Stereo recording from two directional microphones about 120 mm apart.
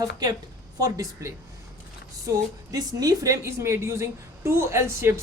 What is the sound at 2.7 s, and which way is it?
A woman's voice, 30° right (ahead or behind).